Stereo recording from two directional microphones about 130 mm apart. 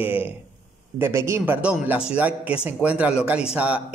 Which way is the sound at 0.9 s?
20° right (ahead or behind).